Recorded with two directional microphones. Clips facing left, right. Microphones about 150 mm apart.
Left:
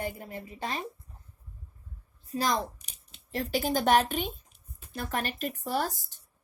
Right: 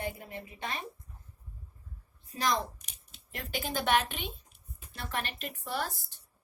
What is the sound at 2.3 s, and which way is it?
A woman's voice, 35° left (ahead or behind).